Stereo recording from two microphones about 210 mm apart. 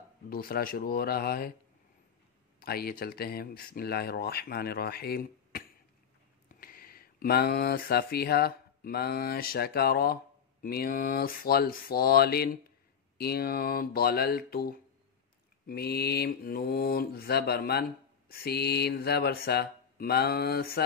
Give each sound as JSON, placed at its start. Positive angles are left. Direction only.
{"t": 0.3, "sound": "speech", "side_deg": 45}
{"t": 2.6, "sound": "speech", "side_deg": 45}